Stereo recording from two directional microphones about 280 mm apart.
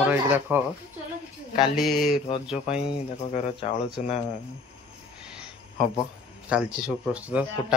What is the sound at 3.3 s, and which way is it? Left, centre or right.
Speech, left.